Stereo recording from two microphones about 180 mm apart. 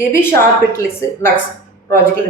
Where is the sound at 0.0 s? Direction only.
15° left (ahead or behind).